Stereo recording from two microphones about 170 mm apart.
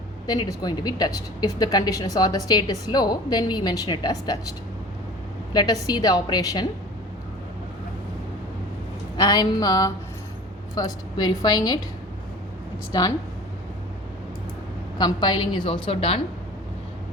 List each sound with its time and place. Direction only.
0.3 s a woman's voice: 25° left (ahead or behind)
5.5 s a woman's voice: 25° left (ahead or behind)
9.1 s a woman's voice: 25° left (ahead or behind)
12.9 s a woman's voice: 20° left (ahead or behind)
14.9 s a woman's voice: 25° left (ahead or behind)